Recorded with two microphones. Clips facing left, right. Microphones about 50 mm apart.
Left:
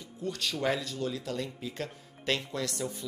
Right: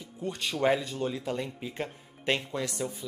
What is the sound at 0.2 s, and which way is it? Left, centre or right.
Speech, right.